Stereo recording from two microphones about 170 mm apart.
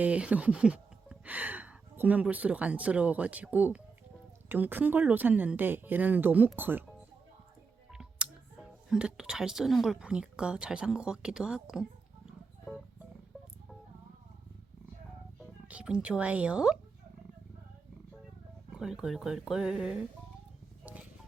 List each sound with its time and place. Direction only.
0.0 s speech: 5° right (ahead or behind)
7.9 s music: 5° right (ahead or behind)
8.9 s a woman's voice: 5° right (ahead or behind)
15.4 s speech: 5° right (ahead or behind)
18.7 s a woman's voice: 5° right (ahead or behind)